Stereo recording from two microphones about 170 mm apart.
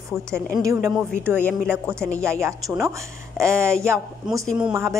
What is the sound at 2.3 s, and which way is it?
A woman's voice, 15° right (ahead or behind).